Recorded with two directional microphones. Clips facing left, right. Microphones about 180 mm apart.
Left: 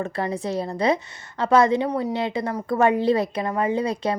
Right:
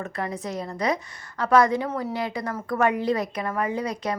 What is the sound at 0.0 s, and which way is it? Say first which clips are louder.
A woman's voice: left 4 dB; 30° left (ahead or behind).